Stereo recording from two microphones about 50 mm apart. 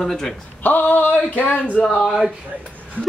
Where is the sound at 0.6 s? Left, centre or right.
Left.